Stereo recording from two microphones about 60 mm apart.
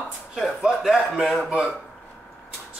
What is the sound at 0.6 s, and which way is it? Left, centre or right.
Speech, centre.